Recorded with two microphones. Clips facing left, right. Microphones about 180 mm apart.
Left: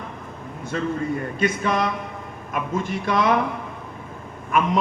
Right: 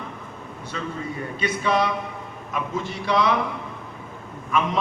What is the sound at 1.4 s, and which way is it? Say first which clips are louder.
A man's voice: right 1 dB; 50° left (ahead or behind).